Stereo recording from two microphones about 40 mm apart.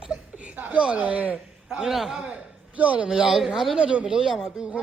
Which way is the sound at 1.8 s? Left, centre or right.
Centre.